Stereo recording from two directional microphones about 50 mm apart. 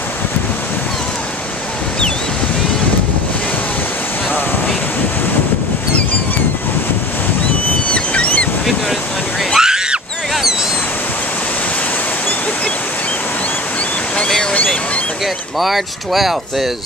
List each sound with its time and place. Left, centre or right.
7.9 s a sound: left
9.6 s screaming: centre
15.6 s speech: centre